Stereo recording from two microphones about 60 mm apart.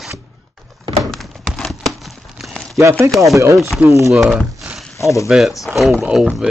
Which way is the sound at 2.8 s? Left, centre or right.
Right.